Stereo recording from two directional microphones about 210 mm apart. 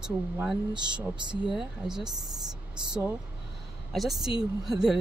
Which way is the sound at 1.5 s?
Centre (ahead or behind).